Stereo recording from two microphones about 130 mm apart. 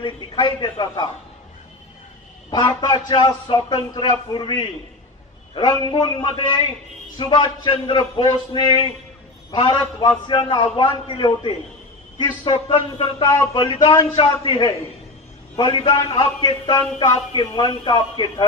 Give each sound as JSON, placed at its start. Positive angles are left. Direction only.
{"t": 0.0, "sound": "a man's voice", "side_deg": 35}
{"t": 3.1, "sound": "a man's voice", "side_deg": 35}
{"t": 13.2, "sound": "speech", "side_deg": 25}
{"t": 13.5, "sound": "a man's voice", "side_deg": 35}